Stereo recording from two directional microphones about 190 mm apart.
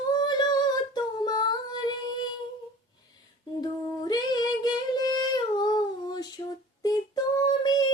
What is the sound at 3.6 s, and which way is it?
Singing, 20° left (ahead or behind).